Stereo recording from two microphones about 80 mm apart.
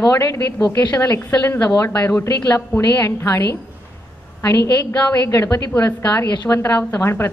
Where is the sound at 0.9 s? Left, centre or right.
Left.